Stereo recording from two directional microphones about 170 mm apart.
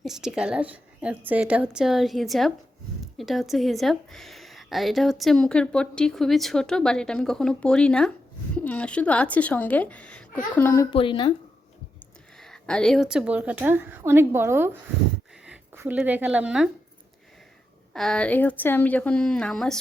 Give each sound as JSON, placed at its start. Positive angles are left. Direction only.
{"t": 0.0, "sound": "a woman's voice", "side_deg": -5}
{"t": 10.9, "sound": "speech", "side_deg": 30}
{"t": 12.4, "sound": "a woman's voice", "side_deg": 5}
{"t": 17.9, "sound": "a woman's voice", "side_deg": 5}